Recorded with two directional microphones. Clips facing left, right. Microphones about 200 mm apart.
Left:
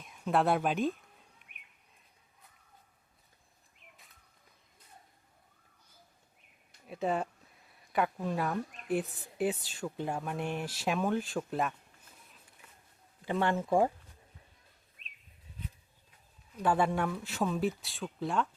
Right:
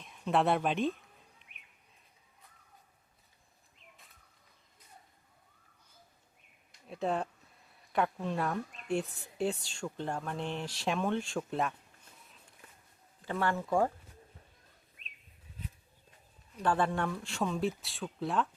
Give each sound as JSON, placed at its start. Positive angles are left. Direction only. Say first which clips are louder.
{"t": 0.0, "sound": "speech", "louder": "even", "side_deg": 0}
{"t": 6.7, "sound": "a sound", "louder": "left 1 dB", "side_deg": 5}
{"t": 7.9, "sound": "speech", "louder": "left 1 dB", "side_deg": 5}
{"t": 13.2, "sound": "speech", "louder": "left 2 dB", "side_deg": 20}
{"t": 16.6, "sound": "speech", "louder": "left 1 dB", "side_deg": 10}